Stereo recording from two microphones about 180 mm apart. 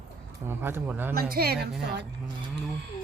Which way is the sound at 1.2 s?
60° right (ahead or behind).